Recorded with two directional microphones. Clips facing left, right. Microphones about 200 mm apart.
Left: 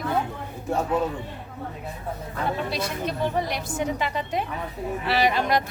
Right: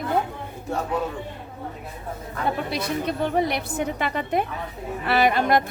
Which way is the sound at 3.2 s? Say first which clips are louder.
Right 2 dB; 60° right (ahead or behind).